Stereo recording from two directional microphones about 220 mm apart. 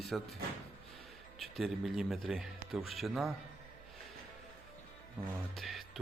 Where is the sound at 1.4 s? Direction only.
Centre (ahead or behind).